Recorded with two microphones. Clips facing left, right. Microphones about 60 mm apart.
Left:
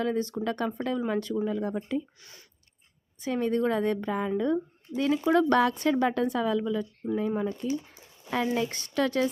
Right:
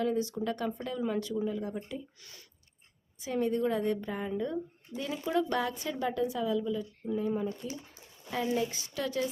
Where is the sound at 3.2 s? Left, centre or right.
Left.